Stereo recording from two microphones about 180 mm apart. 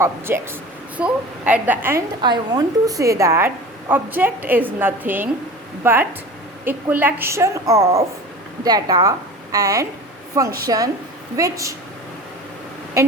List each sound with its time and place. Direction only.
0.0 s a woman's voice: 15° right (ahead or behind)
2.2 s a woman's voice: 25° right (ahead or behind)